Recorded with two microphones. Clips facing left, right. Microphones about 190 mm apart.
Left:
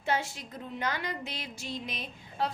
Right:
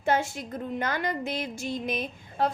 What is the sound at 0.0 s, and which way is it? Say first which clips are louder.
A woman's voice: right 5 dB; 50° right (ahead or behind).